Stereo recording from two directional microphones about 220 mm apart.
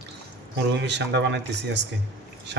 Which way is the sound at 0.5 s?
50° right (ahead or behind).